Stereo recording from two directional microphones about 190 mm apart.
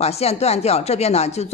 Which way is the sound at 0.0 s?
35° left (ahead or behind).